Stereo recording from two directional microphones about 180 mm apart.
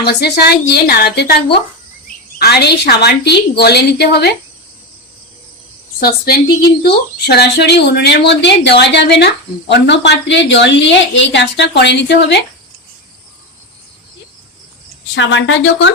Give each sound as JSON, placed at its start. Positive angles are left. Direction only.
{"t": 0.0, "sound": "a woman's voice", "side_deg": 65}
{"t": 6.0, "sound": "a woman's voice", "side_deg": 55}
{"t": 15.1, "sound": "speech", "side_deg": 90}